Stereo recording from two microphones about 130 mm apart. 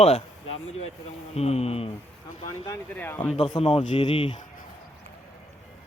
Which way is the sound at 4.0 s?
35° left (ahead or behind).